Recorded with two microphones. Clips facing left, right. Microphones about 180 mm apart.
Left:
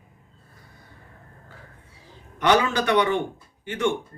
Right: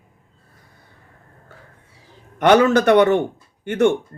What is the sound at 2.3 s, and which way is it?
Speech, 55° right (ahead or behind).